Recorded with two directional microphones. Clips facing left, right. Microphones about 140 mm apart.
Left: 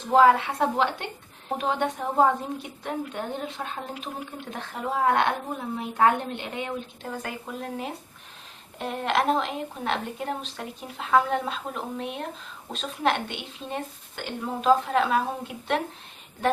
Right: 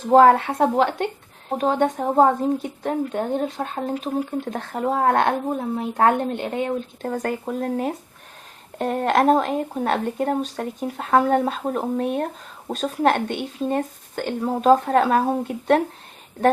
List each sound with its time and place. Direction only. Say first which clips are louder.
0.1 s speech: right 5 dB; 45° right (ahead or behind)